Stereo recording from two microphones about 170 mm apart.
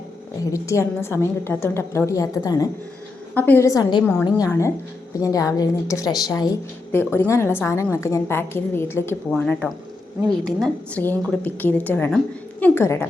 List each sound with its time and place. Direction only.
0.5 s a woman's voice: 15° left (ahead or behind)
4.0 s speech: 10° left (ahead or behind)